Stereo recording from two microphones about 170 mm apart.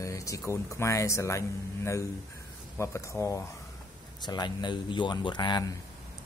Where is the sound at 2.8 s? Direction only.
15° left (ahead or behind).